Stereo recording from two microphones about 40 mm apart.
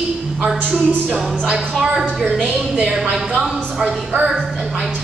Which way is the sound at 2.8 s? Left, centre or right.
Centre.